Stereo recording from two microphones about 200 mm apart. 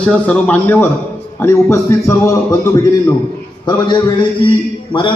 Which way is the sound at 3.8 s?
20° left (ahead or behind).